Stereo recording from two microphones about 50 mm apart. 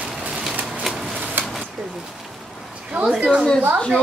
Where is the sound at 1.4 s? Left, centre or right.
Right.